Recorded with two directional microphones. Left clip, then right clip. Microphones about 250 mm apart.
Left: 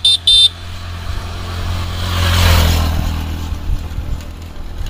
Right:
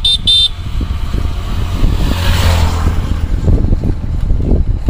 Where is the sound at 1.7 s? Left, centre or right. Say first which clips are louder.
Right 2 dB; right.